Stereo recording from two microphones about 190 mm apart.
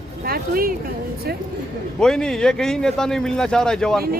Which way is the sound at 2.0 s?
5° left (ahead or behind).